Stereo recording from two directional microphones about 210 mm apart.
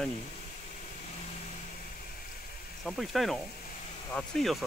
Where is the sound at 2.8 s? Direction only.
Centre (ahead or behind).